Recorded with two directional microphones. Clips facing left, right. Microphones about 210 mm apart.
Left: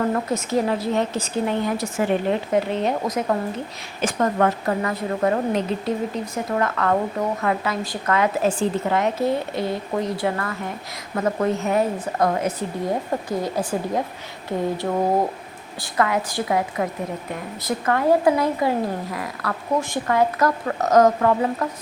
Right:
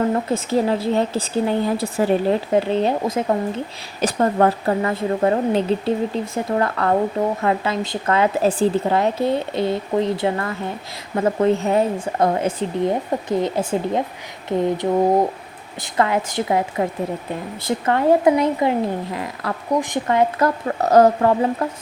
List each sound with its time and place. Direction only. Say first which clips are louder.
0.1 s speech: right 2 dB; 30° right (ahead or behind)
15.8 s speech: right 2 dB; 25° right (ahead or behind)